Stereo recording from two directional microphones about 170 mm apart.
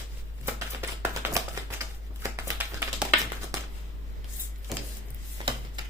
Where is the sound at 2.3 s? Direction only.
10° right (ahead or behind).